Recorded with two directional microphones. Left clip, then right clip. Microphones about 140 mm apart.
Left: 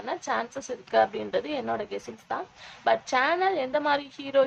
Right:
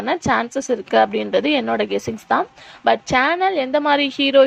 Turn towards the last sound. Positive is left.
turn(degrees=-40)  # may be behind; listen again after turning